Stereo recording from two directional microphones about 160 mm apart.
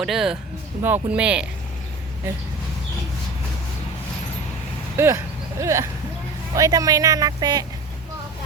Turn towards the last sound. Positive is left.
turn(degrees=-25)  # may be behind; listen again after turning